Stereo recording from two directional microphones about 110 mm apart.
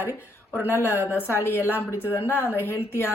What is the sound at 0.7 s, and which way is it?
Speech, 25° left (ahead or behind).